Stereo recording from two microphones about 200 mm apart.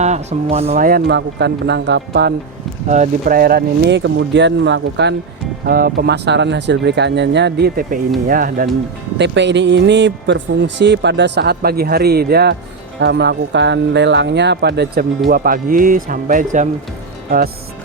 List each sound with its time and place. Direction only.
0.0 s speech: 35° right (ahead or behind)
0.9 s speech: 50° right (ahead or behind)
2.9 s speech: 40° right (ahead or behind); by 5.1 s 60° right (ahead or behind)
5.6 s speech: 50° right (ahead or behind)
9.1 s speech: 60° right (ahead or behind); by 16.6 s 40° right (ahead or behind)